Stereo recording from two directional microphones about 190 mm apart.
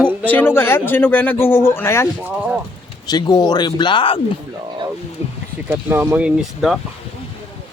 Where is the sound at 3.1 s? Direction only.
20° left (ahead or behind).